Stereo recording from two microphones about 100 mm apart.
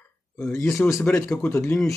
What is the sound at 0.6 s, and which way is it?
Speech, 20° left (ahead or behind).